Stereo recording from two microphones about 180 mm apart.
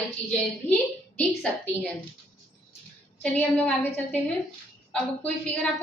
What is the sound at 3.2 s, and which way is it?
A woman's voice, 5° left (ahead or behind).